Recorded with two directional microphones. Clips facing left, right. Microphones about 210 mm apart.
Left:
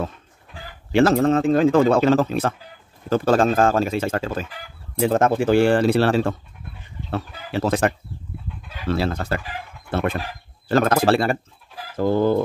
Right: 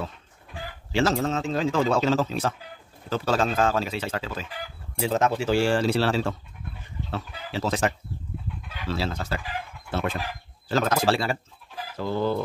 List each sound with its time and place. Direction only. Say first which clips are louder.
0.9 s speech: left 8 dB; 55° left (ahead or behind)